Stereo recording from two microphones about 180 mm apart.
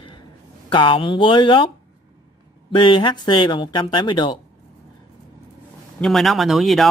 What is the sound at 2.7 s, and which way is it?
Speech, 25° left (ahead or behind).